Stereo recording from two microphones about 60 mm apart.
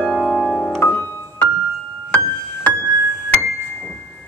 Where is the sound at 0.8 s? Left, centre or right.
Left.